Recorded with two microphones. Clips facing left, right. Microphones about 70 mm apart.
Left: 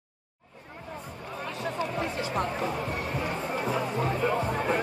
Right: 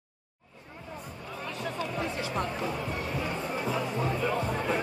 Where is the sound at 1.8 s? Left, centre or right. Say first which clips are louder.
Left 2 dB; left.